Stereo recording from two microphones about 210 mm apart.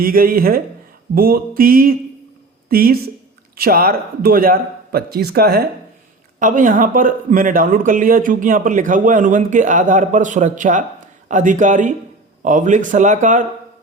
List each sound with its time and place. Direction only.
0.0 s speech: 45° right (ahead or behind)